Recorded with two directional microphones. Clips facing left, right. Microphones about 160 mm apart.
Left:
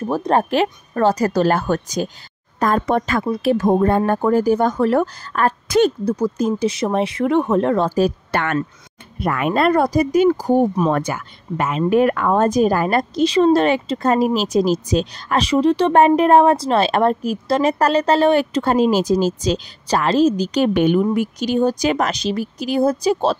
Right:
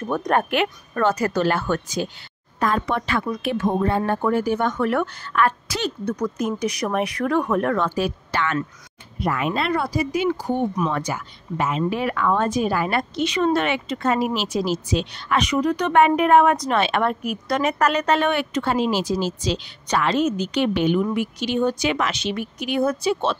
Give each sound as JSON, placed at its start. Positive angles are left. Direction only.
{"t": 0.1, "sound": "speech", "side_deg": 30}
{"t": 6.0, "sound": "speech", "side_deg": 30}
{"t": 8.3, "sound": "speech", "side_deg": 55}
{"t": 10.9, "sound": "speech", "side_deg": 55}
{"t": 20.7, "sound": "speech", "side_deg": 50}
{"t": 21.0, "sound": "speech", "side_deg": 40}